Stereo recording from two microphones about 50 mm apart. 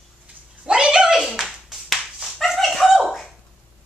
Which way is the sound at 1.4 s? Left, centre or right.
Centre.